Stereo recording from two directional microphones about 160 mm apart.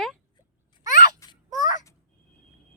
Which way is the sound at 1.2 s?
20° left (ahead or behind).